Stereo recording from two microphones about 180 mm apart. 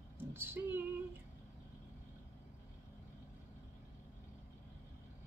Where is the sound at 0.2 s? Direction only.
10° right (ahead or behind).